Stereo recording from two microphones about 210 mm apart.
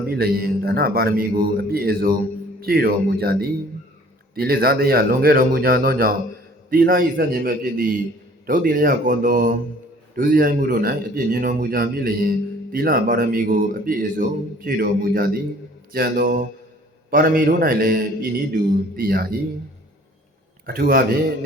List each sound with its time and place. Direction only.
0.1 s speech: 45° right (ahead or behind)
4.4 s speech: 45° right (ahead or behind)
20.7 s speech: 45° right (ahead or behind)